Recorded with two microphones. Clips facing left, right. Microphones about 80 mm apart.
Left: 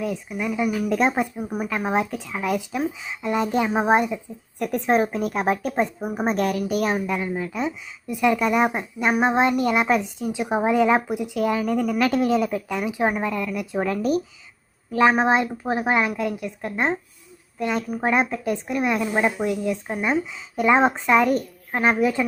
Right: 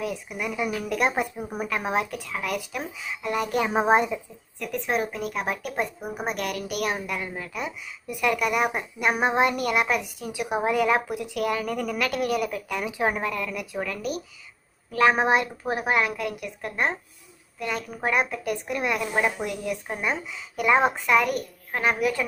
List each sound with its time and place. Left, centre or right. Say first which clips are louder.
0.3 s speech: left 5 dB; centre
0.9 s a woman's voice: left 3 dB; left
1.2 s a woman's voice: left 4 dB; centre
1.7 s a woman's voice: left 3 dB; centre
3.8 s speech: even; centre
4.6 s a woman's voice: left 6 dB; left
7.1 s a woman's voice: left 6 dB; centre
13.7 s a woman's voice: left 9 dB; left
14.9 s a woman's voice: left 2 dB; centre